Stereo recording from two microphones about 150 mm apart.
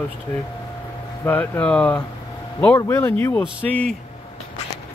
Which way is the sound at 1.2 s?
15° left (ahead or behind).